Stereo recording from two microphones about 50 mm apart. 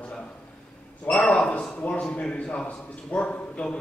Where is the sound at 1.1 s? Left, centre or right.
Left.